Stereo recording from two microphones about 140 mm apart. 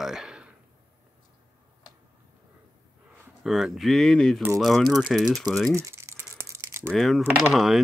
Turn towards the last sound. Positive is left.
turn(degrees=0)  # may be behind; listen again after turning